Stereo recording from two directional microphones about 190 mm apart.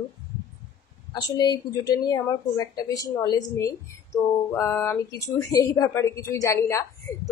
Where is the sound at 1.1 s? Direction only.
20° left (ahead or behind).